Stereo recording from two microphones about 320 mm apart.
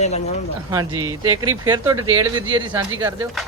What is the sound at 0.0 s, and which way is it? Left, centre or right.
Speech, left.